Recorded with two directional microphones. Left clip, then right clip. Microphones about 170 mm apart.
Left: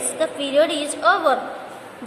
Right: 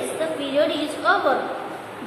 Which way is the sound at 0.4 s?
55° left (ahead or behind).